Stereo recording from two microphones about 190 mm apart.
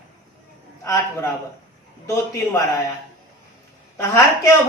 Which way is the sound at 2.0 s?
15° left (ahead or behind).